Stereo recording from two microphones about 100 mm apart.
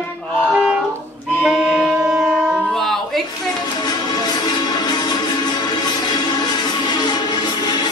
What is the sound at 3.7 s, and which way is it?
Music, 45° left (ahead or behind).